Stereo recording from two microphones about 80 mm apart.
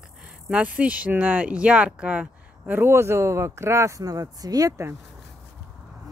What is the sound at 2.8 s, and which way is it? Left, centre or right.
Speech, right.